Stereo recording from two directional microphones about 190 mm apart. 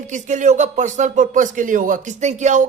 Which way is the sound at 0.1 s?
40° right (ahead or behind).